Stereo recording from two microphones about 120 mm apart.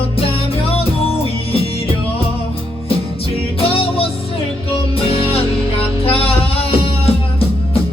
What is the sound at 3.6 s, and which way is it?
Music, 50° left (ahead or behind).